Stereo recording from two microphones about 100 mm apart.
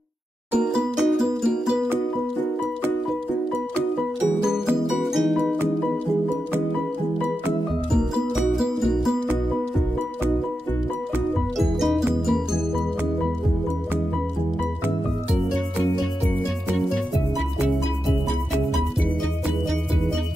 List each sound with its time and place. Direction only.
0.5 s music: 5° right (ahead or behind)
5.1 s music: centre (ahead or behind)
8.1 s music: centre (ahead or behind)
11.5 s music: centre (ahead or behind)